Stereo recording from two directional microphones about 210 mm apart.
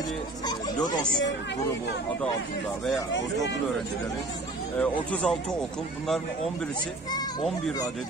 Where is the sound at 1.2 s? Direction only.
55° left (ahead or behind).